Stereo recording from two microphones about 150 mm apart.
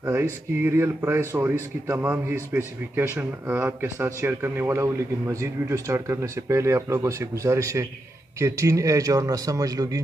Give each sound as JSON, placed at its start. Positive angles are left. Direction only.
{"t": 0.0, "sound": "a man's voice", "side_deg": -15}